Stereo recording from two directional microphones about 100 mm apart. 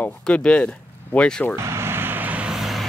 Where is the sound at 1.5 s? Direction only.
25° right (ahead or behind).